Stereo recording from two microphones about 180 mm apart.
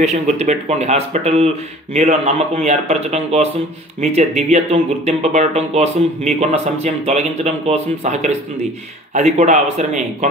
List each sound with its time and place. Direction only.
0.0 s speech: 35° right (ahead or behind)